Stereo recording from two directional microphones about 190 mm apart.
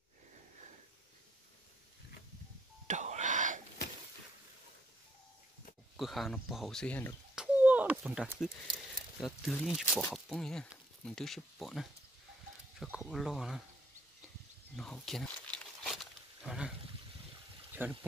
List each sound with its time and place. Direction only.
2.9 s wail: 40° right (ahead or behind)
5.9 s speech: centre (ahead or behind)
7.3 s a sound: 10° right (ahead or behind)
9.2 s speech: centre (ahead or behind)
14.8 s wild animals: centre (ahead or behind)
17.8 s speech: 10° right (ahead or behind)